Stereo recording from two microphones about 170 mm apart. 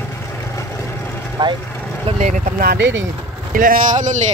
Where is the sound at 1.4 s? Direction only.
25° right (ahead or behind).